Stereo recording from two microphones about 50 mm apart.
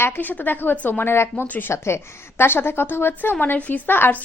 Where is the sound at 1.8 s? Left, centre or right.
Left.